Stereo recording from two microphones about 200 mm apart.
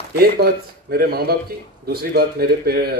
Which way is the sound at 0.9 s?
50° right (ahead or behind).